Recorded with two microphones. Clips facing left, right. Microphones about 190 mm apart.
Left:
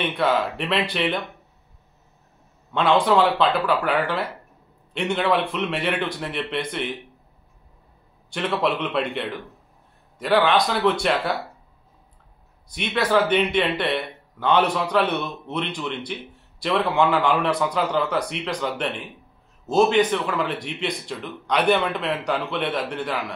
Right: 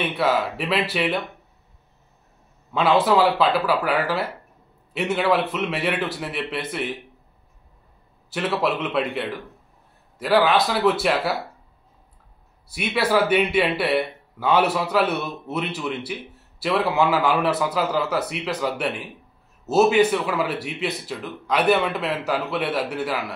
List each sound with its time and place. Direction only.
0.0 s speech: 5° right (ahead or behind)
2.7 s speech: 5° right (ahead or behind)
8.3 s speech: 5° right (ahead or behind)
12.6 s speech: 5° right (ahead or behind)